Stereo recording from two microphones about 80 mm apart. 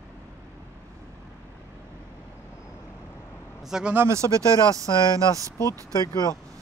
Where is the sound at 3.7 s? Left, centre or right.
Centre.